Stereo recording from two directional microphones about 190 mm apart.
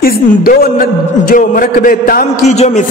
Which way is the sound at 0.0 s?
50° left (ahead or behind).